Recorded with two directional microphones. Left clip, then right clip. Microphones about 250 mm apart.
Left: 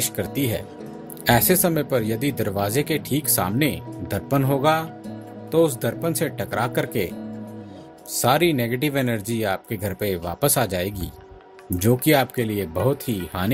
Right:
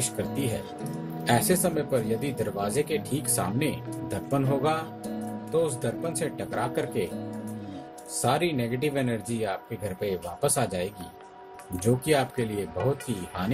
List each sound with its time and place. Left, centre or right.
0.2 s speech: left
8.2 s speech: left